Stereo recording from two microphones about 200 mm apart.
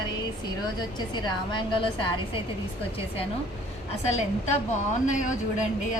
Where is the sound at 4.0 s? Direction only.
35° left (ahead or behind).